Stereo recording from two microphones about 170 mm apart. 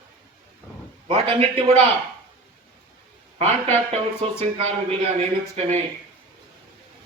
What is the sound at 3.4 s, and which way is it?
A man's voice, 40° right (ahead or behind).